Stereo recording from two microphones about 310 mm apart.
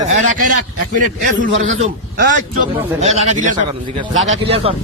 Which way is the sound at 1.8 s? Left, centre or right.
Right.